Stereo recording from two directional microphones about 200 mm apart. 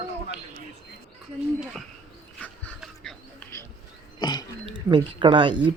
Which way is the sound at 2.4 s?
5° left (ahead or behind).